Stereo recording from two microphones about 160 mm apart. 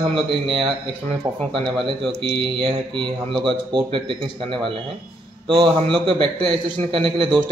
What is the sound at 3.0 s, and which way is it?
Speech, 30° right (ahead or behind).